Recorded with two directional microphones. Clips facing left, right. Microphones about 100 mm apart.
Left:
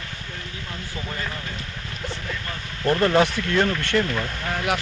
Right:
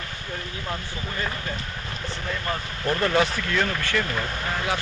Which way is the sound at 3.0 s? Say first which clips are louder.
Left 3 dB; 30° left (ahead or behind).